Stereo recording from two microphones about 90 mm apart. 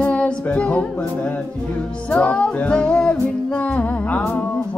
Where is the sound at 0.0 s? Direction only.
15° left (ahead or behind).